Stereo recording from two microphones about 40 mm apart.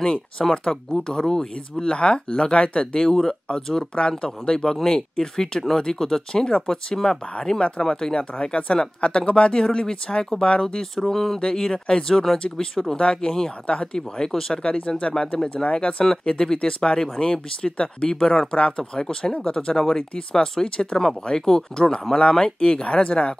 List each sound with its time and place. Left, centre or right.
0.0 s speech: centre
1.9 s speech: left
3.1 s speech: centre
4.1 s speech: centre
10.6 s speech: centre